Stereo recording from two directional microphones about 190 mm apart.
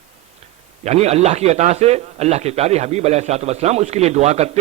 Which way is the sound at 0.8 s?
35° right (ahead or behind).